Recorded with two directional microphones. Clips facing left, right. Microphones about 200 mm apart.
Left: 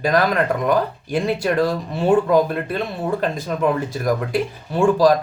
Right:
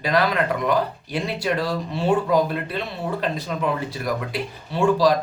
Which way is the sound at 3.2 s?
50° left (ahead or behind).